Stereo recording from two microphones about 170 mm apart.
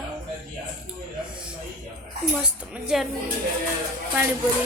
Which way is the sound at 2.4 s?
5° right (ahead or behind).